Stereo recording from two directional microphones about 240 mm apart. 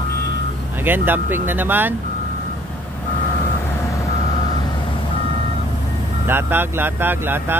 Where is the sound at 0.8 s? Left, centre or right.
Centre.